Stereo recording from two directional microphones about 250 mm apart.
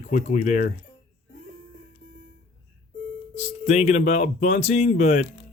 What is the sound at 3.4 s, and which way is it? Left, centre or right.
Speech, left.